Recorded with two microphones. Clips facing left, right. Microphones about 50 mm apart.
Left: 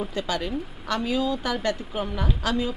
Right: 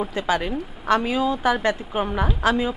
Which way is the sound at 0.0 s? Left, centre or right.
Right.